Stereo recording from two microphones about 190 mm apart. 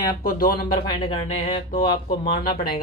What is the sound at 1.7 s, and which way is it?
Speech, 50° left (ahead or behind).